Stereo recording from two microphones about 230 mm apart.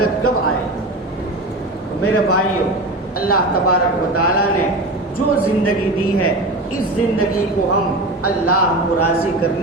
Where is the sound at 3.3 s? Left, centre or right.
Left.